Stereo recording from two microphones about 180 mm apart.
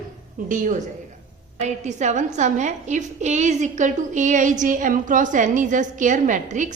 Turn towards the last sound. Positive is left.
turn(degrees=-45)  # may be behind; listen again after turning